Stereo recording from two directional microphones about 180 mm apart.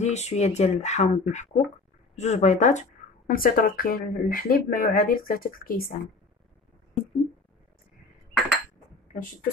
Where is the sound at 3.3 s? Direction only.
50° left (ahead or behind).